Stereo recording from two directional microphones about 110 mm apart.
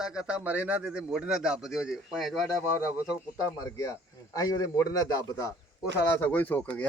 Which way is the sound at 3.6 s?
35° left (ahead or behind).